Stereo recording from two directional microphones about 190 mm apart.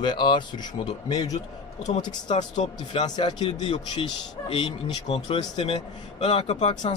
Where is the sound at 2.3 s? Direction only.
40° left (ahead or behind).